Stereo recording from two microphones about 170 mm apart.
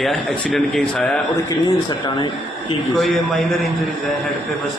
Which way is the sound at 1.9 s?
25° left (ahead or behind).